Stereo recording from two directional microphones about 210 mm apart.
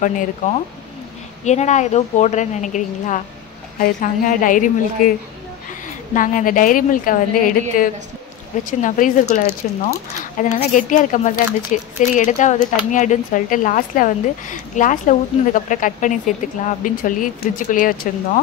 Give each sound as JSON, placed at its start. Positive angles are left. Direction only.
{"t": 1.4, "sound": "a woman's voice", "side_deg": 35}
{"t": 6.1, "sound": "a woman's voice", "side_deg": 40}